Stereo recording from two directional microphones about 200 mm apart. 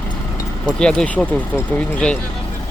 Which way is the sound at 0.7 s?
5° left (ahead or behind).